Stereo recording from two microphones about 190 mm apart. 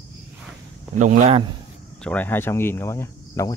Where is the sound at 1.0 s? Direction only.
40° right (ahead or behind).